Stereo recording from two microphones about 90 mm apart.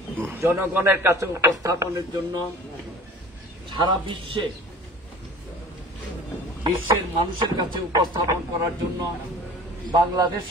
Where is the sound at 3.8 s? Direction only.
50° right (ahead or behind).